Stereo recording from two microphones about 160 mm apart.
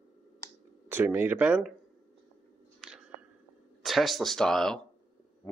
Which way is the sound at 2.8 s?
5° right (ahead or behind).